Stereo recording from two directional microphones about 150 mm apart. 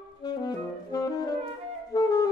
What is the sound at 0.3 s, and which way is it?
Saxophone, 25° left (ahead or behind).